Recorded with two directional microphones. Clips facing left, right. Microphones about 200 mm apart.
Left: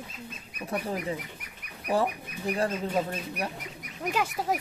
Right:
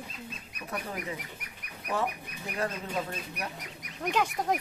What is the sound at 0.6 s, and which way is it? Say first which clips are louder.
Speech: left 5 dB; 30° left (ahead or behind).